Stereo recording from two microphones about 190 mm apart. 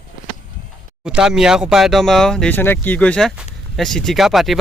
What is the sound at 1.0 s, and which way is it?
Speech, 5° right (ahead or behind).